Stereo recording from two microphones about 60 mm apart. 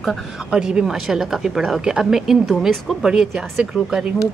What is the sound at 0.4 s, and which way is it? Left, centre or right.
A woman's voice, centre.